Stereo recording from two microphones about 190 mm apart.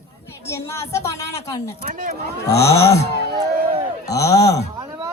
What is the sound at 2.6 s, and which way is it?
Speech, 15° left (ahead or behind).